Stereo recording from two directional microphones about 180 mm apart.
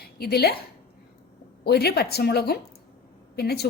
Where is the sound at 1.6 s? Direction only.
65° left (ahead or behind).